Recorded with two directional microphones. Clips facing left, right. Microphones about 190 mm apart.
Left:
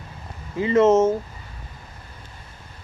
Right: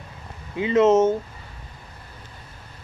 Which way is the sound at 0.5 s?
Centre (ahead or behind).